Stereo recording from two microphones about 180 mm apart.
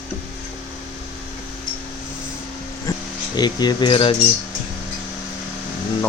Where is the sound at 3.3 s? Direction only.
25° left (ahead or behind).